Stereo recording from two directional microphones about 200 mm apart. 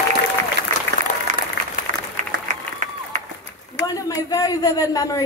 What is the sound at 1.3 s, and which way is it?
Applause, 40° right (ahead or behind).